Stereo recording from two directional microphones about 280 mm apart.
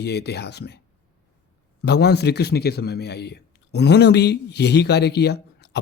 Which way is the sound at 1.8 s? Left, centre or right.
Left.